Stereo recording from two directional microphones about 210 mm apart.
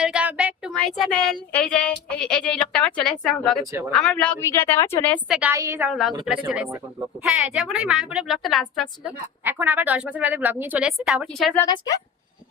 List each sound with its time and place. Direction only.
0.0 s child singing: 5° right (ahead or behind)
3.6 s speech: 15° right (ahead or behind)
3.9 s a woman's voice: 5° left (ahead or behind)
5.3 s a woman's voice: 10° right (ahead or behind)
11.6 s a woman's voice: 15° left (ahead or behind)